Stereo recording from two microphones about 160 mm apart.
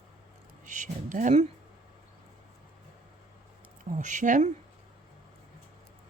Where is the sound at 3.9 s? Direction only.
50° right (ahead or behind).